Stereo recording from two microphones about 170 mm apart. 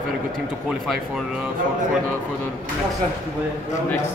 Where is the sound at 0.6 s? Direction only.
Centre (ahead or behind).